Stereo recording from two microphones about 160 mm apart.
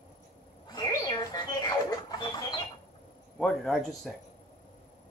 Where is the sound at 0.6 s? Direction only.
25° left (ahead or behind).